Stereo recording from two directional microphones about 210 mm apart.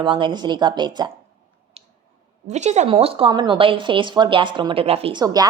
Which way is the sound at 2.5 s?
35° right (ahead or behind).